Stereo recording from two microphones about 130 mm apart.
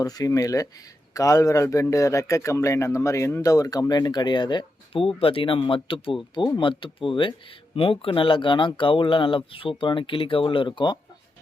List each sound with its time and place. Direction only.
0.0 s speech: 30° left (ahead or behind)